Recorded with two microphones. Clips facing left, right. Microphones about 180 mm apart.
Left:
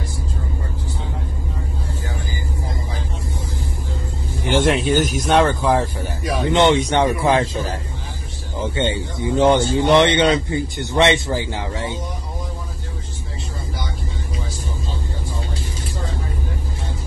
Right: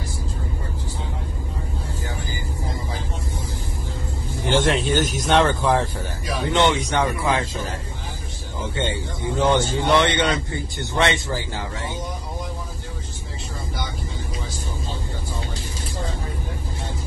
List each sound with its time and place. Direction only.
4.4 s speech: 15° left (ahead or behind)
6.5 s speech: 25° left (ahead or behind)
8.8 s speech: 20° left (ahead or behind)